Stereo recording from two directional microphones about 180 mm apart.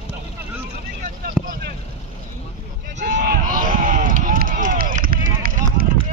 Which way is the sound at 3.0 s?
45° right (ahead or behind).